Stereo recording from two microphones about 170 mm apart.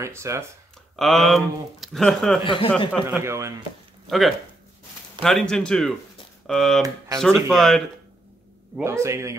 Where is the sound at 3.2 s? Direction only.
15° right (ahead or behind).